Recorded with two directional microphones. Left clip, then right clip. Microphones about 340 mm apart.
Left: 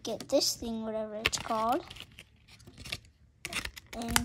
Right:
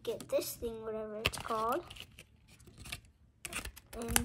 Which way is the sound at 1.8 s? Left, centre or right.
Centre.